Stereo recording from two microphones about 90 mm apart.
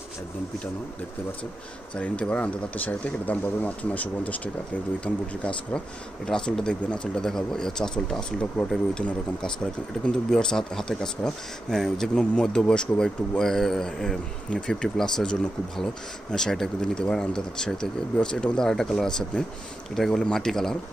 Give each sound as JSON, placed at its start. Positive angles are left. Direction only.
{"t": 2.0, "sound": "speech", "side_deg": 15}